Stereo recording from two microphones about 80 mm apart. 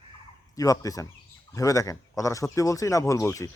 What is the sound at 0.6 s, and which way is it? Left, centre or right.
Speech, left.